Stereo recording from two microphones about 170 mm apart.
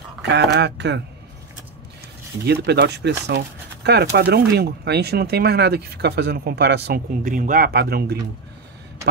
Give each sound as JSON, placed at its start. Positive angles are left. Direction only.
{"t": 0.2, "sound": "speech", "side_deg": -85}
{"t": 2.4, "sound": "speech", "side_deg": -75}
{"t": 7.2, "sound": "speech", "side_deg": -50}